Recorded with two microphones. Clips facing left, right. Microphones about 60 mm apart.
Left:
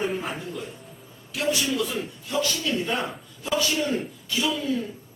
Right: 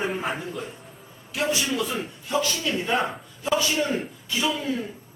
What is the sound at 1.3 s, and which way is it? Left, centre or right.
A man's voice, right.